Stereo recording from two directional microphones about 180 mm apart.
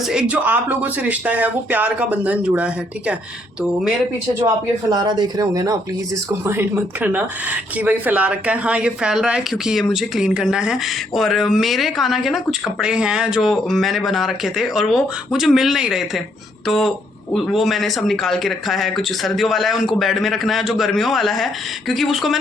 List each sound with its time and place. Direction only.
0.1 s speech: 5° right (ahead or behind)
4.9 s speech: 25° right (ahead or behind); by 22.4 s centre (ahead or behind)